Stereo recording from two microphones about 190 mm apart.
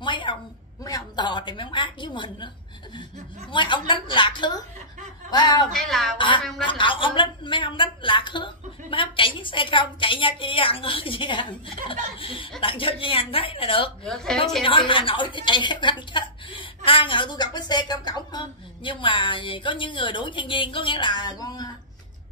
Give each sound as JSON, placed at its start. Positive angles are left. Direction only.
{"t": 0.0, "sound": "a sound", "side_deg": 25}
{"t": 0.8, "sound": "a woman's voice", "side_deg": 20}
{"t": 3.5, "sound": "a woman's voice", "side_deg": 25}
{"t": 5.7, "sound": "music", "side_deg": 0}
{"t": 6.1, "sound": "a woman's voice", "side_deg": 25}
{"t": 14.0, "sound": "music", "side_deg": 5}
{"t": 14.6, "sound": "a woman's voice", "side_deg": 25}